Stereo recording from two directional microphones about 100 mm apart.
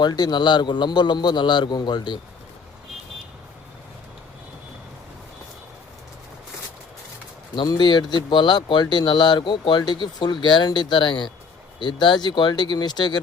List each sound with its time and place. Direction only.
0.0 s speech: 45° left (ahead or behind)
7.5 s speech: 45° left (ahead or behind)